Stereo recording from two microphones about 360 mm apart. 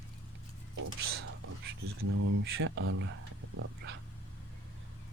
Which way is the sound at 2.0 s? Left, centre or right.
Right.